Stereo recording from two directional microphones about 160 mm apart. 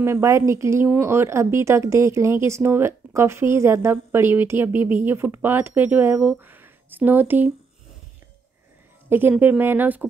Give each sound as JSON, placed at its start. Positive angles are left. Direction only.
{"t": 0.0, "sound": "speech", "side_deg": -15}
{"t": 9.1, "sound": "speech", "side_deg": -10}